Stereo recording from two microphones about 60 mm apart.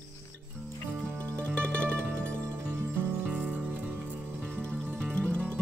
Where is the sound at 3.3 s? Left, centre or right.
Centre.